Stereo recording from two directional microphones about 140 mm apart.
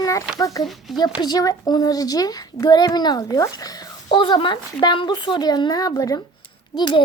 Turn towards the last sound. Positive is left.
turn(degrees=30)  # may be behind; listen again after turning